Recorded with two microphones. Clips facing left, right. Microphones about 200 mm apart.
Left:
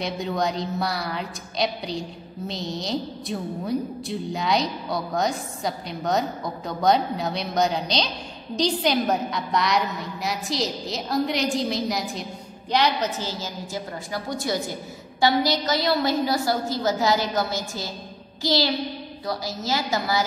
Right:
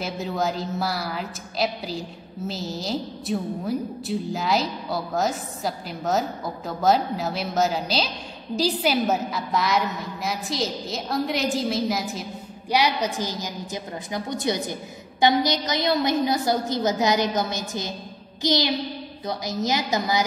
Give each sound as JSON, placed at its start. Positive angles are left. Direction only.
{"t": 0.0, "sound": "a woman's voice", "side_deg": -5}